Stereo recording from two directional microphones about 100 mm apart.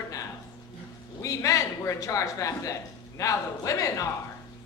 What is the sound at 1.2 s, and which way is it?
A man's voice, 35° left (ahead or behind).